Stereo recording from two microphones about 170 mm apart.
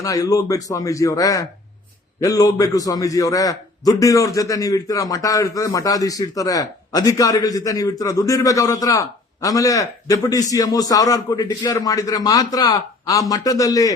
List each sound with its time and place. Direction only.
0.0 s a man's voice: 20° left (ahead or behind)